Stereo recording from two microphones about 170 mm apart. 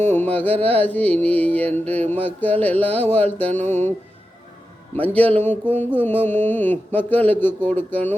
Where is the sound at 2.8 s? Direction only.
35° right (ahead or behind).